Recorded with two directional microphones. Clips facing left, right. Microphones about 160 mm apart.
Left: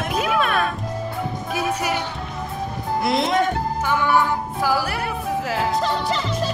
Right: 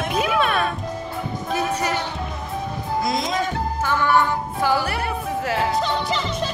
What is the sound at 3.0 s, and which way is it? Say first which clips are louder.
Music: left 5 dB; 60° left (ahead or behind).